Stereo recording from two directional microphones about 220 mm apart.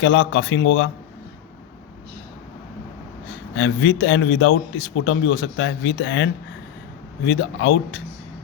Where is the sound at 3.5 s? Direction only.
60° left (ahead or behind).